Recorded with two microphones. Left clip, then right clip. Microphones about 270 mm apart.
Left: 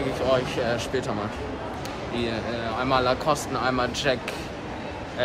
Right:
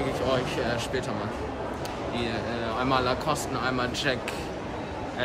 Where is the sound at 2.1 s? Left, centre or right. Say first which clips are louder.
Left 3 dB; centre.